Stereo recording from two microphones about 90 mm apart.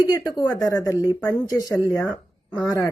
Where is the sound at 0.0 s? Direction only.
45° left (ahead or behind).